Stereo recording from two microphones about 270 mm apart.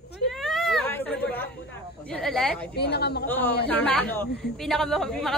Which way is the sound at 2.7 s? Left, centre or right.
Left.